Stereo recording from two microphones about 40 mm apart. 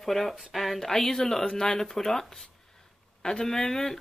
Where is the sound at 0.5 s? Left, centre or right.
Centre.